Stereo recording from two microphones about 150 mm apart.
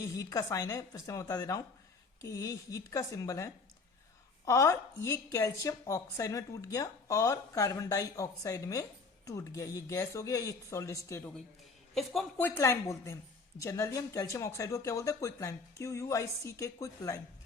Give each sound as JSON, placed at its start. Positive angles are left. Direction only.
{"t": 0.0, "sound": "a woman's voice", "side_deg": 20}
{"t": 12.4, "sound": "a woman's voice", "side_deg": 15}